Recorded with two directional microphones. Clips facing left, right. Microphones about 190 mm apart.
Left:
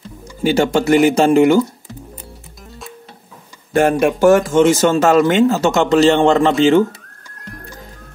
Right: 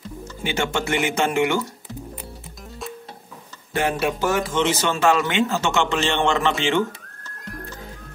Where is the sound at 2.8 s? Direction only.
Centre (ahead or behind).